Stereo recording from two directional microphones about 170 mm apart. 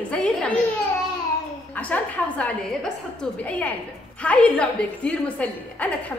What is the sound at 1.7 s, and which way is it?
A woman's voice, 10° left (ahead or behind).